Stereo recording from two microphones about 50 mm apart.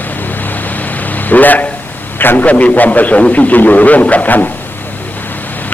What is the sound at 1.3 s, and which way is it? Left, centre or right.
A man's voice, left.